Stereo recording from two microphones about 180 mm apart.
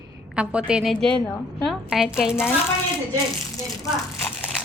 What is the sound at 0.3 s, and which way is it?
Speech, 5° right (ahead or behind).